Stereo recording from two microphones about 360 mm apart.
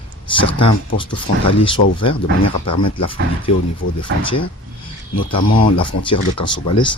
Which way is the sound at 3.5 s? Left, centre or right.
Centre.